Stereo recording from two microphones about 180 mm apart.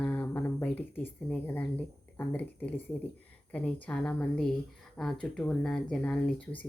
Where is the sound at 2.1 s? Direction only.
10° left (ahead or behind).